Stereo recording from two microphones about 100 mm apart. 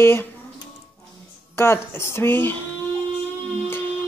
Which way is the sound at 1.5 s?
25° left (ahead or behind).